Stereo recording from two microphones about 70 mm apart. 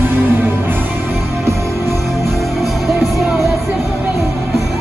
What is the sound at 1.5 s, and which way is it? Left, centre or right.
Music, right.